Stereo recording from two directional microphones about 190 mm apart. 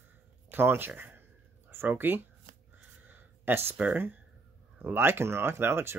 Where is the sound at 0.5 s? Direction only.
10° right (ahead or behind).